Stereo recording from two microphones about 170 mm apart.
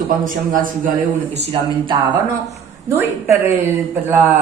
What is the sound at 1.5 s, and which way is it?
Speech, 30° right (ahead or behind).